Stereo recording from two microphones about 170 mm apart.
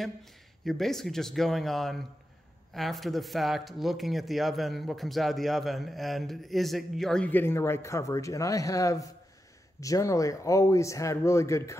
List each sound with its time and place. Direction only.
0.0 s speech: centre (ahead or behind); by 11.7 s 15° left (ahead or behind)